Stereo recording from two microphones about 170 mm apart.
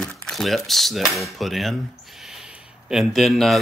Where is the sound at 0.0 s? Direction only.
Centre (ahead or behind).